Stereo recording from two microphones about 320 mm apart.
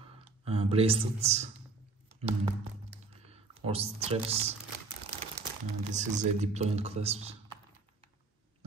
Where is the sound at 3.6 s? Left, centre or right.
Centre.